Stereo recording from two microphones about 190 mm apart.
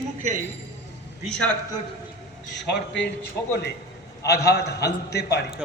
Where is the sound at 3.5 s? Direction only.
60° left (ahead or behind).